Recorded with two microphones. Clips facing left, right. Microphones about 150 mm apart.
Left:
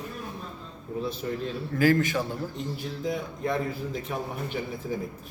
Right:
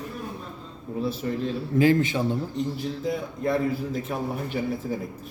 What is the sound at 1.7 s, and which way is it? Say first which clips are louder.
Speech: right 2 dB; 25° right (ahead or behind).